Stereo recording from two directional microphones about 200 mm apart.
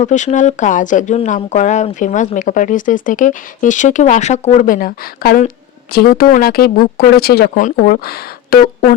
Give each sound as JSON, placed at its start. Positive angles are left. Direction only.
{"t": 0.0, "sound": "speech", "side_deg": 35}